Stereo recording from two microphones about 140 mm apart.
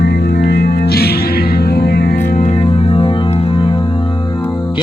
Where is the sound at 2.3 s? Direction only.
60° left (ahead or behind).